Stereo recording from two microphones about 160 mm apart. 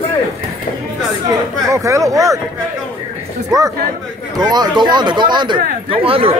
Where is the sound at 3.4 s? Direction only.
20° right (ahead or behind).